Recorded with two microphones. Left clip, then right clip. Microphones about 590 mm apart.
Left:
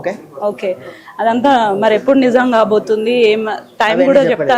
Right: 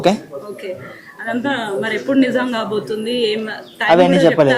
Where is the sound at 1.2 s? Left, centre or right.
Left.